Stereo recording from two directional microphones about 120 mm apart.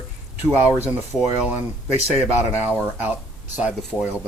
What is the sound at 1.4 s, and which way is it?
Speech, 15° right (ahead or behind).